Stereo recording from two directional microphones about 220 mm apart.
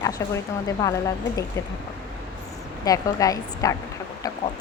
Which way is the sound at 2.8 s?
15° left (ahead or behind).